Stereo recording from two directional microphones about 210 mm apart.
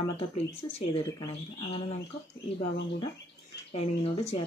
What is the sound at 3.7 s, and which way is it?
Speech, 30° left (ahead or behind).